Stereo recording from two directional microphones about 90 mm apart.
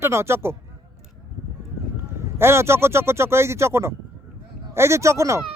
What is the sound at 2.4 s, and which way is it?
Speech, 30° right (ahead or behind).